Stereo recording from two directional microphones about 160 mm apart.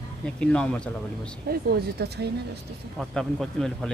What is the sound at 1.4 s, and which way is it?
Speech, 75° right (ahead or behind).